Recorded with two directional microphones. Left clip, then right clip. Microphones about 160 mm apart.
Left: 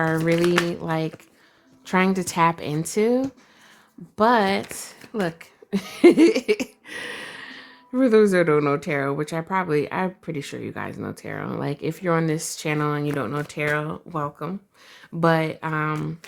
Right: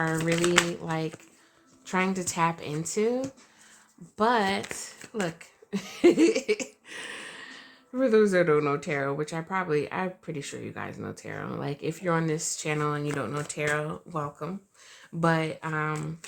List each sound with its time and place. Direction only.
0.3 s speech: 10° left (ahead or behind)
0.7 s a woman's voice: 40° left (ahead or behind)
4.2 s speech: 40° left (ahead or behind)